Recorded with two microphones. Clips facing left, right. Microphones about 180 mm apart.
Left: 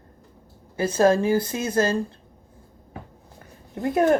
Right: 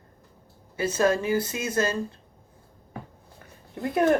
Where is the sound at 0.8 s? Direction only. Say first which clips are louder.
Left 4 dB; 30° left (ahead or behind).